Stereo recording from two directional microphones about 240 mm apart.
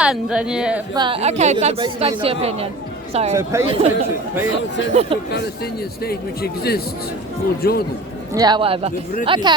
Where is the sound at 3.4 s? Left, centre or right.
Centre.